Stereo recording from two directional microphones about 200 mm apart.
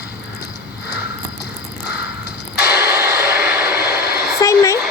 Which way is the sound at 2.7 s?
15° right (ahead or behind).